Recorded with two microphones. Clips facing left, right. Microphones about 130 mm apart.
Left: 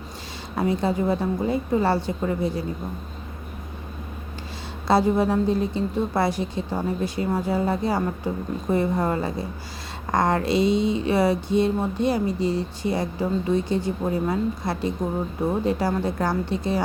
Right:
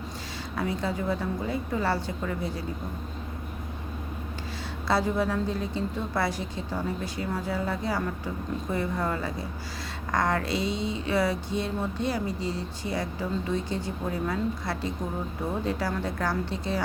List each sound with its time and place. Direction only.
0.5 s a woman's voice: 25° left (ahead or behind)
4.9 s a woman's voice: 20° left (ahead or behind)